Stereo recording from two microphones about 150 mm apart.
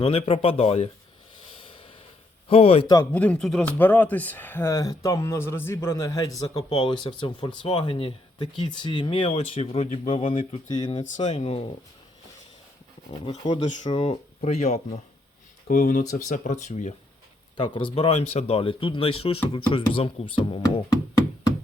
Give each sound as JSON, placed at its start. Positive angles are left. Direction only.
{"t": 0.0, "sound": "speech", "side_deg": 40}
{"t": 1.5, "sound": "snort", "side_deg": 35}
{"t": 2.5, "sound": "speech", "side_deg": 40}
{"t": 3.1, "sound": "speech", "side_deg": 10}
{"t": 6.5, "sound": "speech", "side_deg": 35}
{"t": 11.3, "sound": "speech", "side_deg": 45}
{"t": 13.6, "sound": "speech", "side_deg": 50}
{"t": 13.9, "sound": "speech", "side_deg": 40}
{"t": 15.6, "sound": "speech", "side_deg": 60}
{"t": 17.6, "sound": "speech", "side_deg": 35}